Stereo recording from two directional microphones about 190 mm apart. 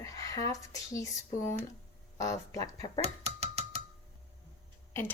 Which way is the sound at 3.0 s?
35° right (ahead or behind).